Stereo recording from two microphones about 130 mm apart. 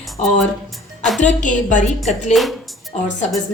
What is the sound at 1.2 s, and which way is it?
A woman's voice, 70° left (ahead or behind).